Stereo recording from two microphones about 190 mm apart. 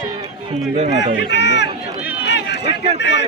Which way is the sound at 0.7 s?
35° right (ahead or behind).